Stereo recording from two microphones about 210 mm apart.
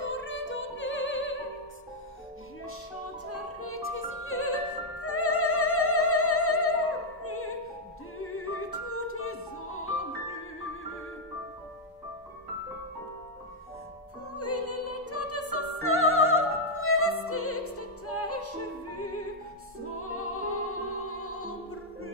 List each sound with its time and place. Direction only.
0.0 s opera: 65° left (ahead or behind)
3.6 s opera: 85° left
8.2 s music: 90° left
14.3 s opera: 90° left
16.7 s opera: 85° left